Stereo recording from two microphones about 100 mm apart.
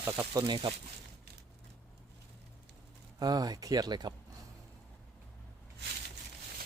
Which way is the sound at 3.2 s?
40° right (ahead or behind).